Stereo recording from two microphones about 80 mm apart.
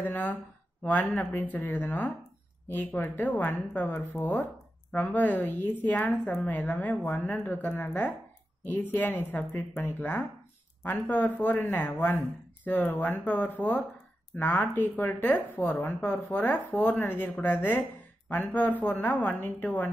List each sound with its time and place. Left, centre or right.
0.0 s speech: left